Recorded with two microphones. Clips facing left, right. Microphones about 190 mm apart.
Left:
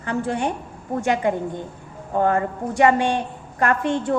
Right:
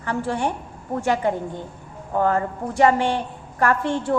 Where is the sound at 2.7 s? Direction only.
15° left (ahead or behind).